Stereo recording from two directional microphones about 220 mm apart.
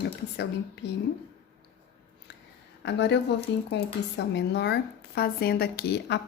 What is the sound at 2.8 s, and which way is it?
A woman's voice, 50° left (ahead or behind).